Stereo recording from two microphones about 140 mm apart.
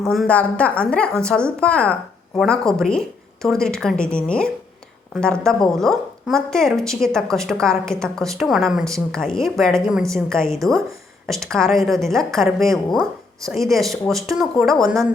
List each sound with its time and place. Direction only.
0.0 s a woman's voice: centre (ahead or behind)
10.4 s a woman's voice: 20° right (ahead or behind)
11.4 s a woman's voice: 5° left (ahead or behind)